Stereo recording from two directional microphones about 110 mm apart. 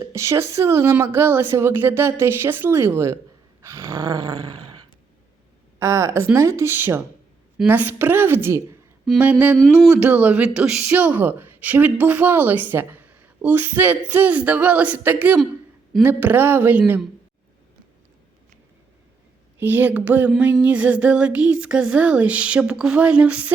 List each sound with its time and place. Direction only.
0.1 s a woman's voice: 25° right (ahead or behind)
3.6 s a sound: 25° right (ahead or behind)
5.8 s a woman's voice: 25° right (ahead or behind)
9.1 s speech: 10° right (ahead or behind)
19.5 s speech: 15° right (ahead or behind)